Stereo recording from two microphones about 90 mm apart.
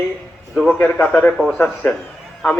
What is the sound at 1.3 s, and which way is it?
Speech, centre (ahead or behind).